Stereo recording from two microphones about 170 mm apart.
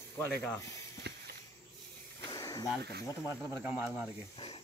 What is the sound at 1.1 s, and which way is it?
Snake, 75° right (ahead or behind).